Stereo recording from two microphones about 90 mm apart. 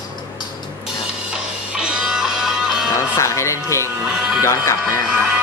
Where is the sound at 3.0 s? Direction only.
35° left (ahead or behind).